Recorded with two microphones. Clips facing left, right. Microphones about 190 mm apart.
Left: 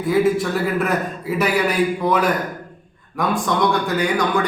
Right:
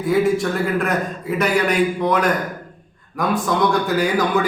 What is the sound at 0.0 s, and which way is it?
A man's voice, centre (ahead or behind).